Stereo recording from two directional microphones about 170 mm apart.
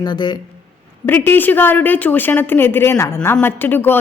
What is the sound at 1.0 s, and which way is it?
A woman's voice, 10° left (ahead or behind).